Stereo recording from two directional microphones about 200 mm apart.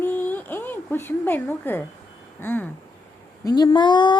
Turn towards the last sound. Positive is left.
turn(degrees=20)  # may be behind; listen again after turning